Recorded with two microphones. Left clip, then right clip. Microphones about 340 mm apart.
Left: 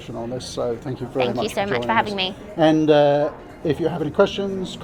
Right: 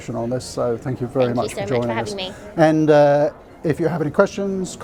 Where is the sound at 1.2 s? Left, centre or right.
Left.